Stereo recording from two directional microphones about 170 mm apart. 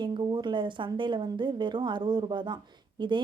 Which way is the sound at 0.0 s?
25° right (ahead or behind).